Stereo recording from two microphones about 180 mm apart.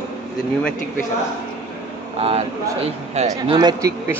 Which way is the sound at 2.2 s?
35° right (ahead or behind).